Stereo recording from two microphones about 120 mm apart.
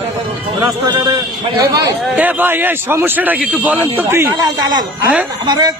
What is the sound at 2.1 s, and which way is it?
A man's voice, 15° right (ahead or behind).